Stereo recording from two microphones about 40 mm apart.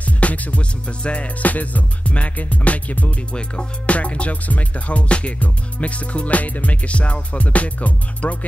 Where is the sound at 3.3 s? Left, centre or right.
Left.